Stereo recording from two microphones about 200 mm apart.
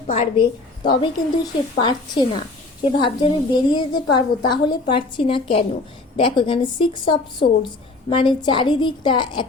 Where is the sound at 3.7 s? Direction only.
20° left (ahead or behind).